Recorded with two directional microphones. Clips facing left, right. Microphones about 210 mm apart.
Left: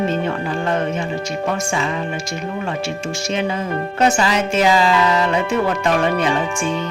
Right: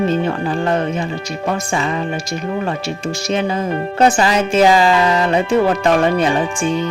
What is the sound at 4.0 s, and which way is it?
Speech, 35° right (ahead or behind).